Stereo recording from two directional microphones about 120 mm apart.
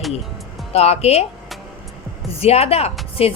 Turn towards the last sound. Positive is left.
turn(degrees=55)  # may be behind; listen again after turning